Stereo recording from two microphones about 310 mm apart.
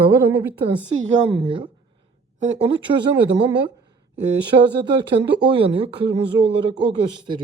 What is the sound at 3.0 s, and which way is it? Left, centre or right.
Speech, centre.